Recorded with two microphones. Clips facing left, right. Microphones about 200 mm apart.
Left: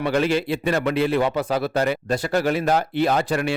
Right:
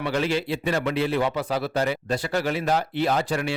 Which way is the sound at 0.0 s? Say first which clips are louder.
Left 4 dB; 55° left (ahead or behind).